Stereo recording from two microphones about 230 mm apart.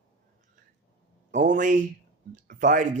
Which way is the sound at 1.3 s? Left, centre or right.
Right.